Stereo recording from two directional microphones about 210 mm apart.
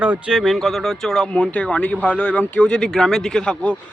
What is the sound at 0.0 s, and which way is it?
A man's voice, 5° right (ahead or behind).